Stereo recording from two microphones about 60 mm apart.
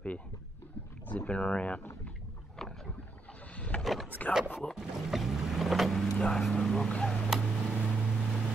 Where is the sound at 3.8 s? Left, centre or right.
Centre.